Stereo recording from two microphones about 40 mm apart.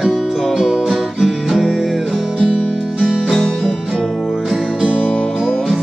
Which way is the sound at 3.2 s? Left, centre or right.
Centre.